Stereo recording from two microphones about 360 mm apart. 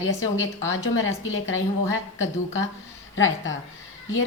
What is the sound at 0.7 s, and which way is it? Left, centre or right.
A woman's voice, left.